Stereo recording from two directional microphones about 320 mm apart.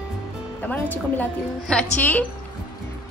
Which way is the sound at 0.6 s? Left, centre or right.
Centre.